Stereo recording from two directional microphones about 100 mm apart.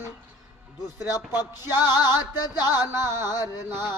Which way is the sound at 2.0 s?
45° left (ahead or behind).